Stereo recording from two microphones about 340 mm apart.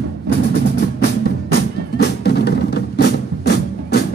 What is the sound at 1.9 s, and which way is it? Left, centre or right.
Music, left.